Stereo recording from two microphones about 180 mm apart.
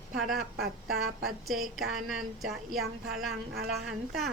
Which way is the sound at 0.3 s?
60° right (ahead or behind).